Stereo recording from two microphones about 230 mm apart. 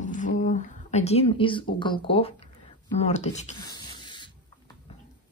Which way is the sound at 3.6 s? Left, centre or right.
Centre.